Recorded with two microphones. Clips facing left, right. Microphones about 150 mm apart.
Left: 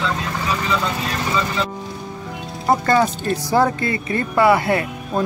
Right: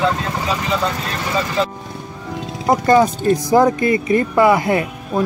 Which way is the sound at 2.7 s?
15° right (ahead or behind).